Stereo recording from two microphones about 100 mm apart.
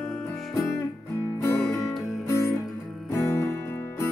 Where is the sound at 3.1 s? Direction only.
30° left (ahead or behind).